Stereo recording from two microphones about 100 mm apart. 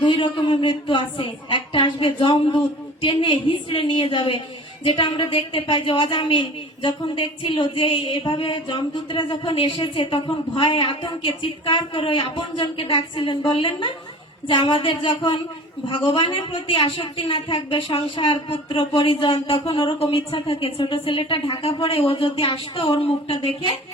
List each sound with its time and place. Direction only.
0.0 s a woman's voice: 55° left (ahead or behind)